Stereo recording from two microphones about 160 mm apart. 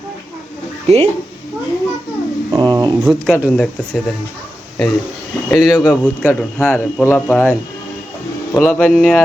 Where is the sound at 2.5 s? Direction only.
25° right (ahead or behind).